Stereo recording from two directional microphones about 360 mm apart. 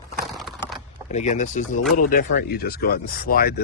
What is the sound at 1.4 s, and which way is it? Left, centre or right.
Speech, left.